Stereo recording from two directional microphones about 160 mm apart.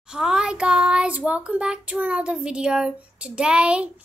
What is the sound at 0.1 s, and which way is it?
Child singing, 5° right (ahead or behind).